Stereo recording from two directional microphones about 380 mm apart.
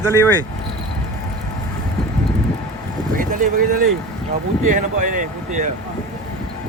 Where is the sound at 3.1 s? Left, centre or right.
Right.